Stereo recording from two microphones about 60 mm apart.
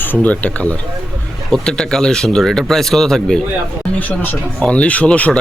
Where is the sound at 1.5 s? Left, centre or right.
Centre.